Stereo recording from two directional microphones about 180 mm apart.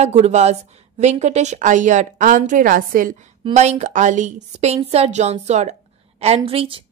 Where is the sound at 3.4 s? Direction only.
40° right (ahead or behind).